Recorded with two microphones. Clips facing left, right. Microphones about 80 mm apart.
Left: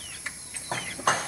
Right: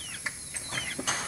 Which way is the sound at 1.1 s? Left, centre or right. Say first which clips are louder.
Left 11 dB; left.